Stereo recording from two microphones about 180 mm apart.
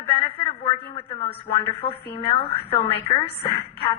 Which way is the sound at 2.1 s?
30° left (ahead or behind).